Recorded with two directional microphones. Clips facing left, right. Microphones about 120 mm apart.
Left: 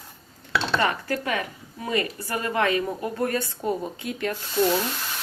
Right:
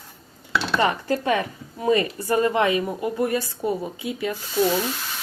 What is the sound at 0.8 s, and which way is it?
A woman's voice, 25° right (ahead or behind).